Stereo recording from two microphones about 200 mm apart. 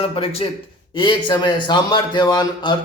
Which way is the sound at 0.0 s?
30° left (ahead or behind).